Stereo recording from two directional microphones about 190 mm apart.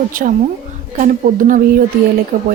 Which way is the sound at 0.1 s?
45° right (ahead or behind).